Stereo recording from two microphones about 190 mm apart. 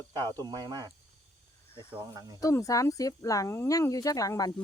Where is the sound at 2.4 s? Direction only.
15° left (ahead or behind).